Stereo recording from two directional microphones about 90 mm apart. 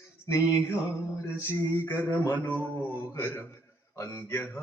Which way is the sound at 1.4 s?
30° left (ahead or behind).